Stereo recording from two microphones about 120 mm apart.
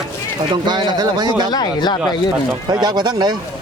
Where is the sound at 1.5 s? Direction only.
35° left (ahead or behind).